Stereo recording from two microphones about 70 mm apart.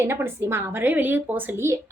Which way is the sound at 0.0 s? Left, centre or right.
Right.